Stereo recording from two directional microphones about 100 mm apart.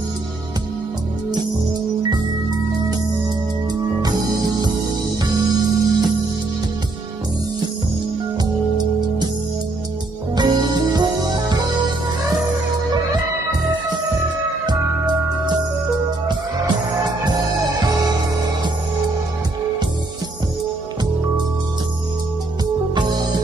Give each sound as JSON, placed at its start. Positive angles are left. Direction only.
{"t": 4.0, "sound": "music", "side_deg": -45}
{"t": 8.4, "sound": "music", "side_deg": -45}
{"t": 10.3, "sound": "music", "side_deg": -45}
{"t": 22.9, "sound": "music", "side_deg": -45}